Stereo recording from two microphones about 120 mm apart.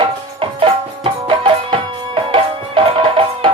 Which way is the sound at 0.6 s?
45° right (ahead or behind).